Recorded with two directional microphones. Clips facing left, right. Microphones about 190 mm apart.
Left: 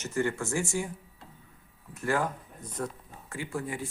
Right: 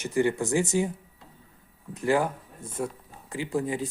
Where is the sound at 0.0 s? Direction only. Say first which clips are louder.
Right 5 dB; 15° right (ahead or behind).